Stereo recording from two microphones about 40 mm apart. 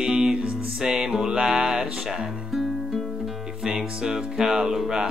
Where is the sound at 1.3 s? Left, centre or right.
Right.